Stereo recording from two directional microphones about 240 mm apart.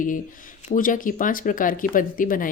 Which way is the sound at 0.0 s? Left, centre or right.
Left.